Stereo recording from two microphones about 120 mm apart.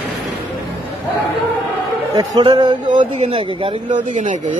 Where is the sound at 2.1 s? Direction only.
35° right (ahead or behind).